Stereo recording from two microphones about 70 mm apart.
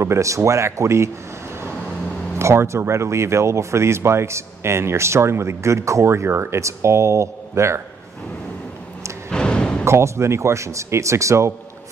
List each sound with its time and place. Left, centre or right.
0.0 s speech: right
2.3 s speech: right
9.3 s music: centre
9.8 s speech: right